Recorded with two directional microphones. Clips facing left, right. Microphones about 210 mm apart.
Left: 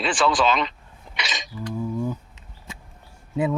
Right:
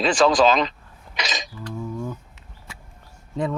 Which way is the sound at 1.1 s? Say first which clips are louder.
Right 3 dB; 40° right (ahead or behind).